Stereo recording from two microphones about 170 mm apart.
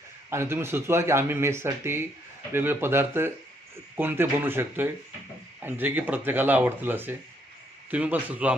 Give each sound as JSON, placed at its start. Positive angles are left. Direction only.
{"t": 0.3, "sound": "speech", "side_deg": -15}